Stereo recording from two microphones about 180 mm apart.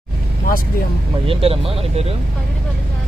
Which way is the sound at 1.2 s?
30° right (ahead or behind).